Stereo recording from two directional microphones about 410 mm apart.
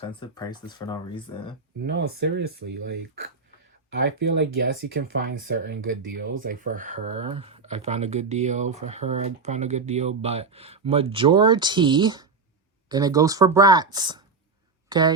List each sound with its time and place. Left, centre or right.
0.2 s speech: centre
1.8 s speech: right
4.2 s speech: right